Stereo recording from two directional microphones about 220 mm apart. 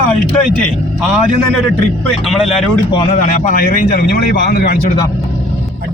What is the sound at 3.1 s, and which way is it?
A man's voice, 35° left (ahead or behind).